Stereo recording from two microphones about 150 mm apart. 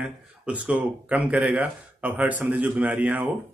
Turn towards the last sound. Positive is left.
turn(degrees=-10)  # may be behind; listen again after turning